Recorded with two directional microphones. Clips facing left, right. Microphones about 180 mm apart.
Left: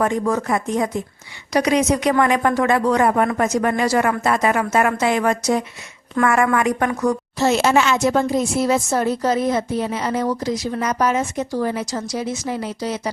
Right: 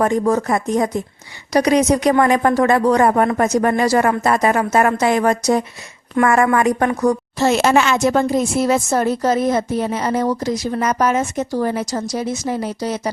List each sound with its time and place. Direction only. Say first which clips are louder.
0.0 s speech: right 3 dB; 40° right (ahead or behind)
7.3 s speech: right 1 dB; 55° right (ahead or behind)